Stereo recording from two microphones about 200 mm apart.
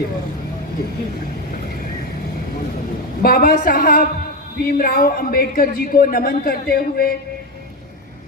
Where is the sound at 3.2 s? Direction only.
45° left (ahead or behind).